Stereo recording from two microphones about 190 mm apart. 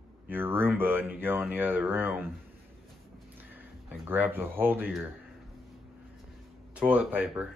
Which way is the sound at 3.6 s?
10° right (ahead or behind).